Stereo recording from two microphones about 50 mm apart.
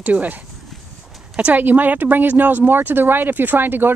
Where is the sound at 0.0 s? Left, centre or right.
Right.